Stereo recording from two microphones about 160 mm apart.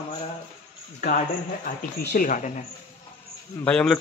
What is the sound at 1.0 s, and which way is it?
Speech, 60° left (ahead or behind).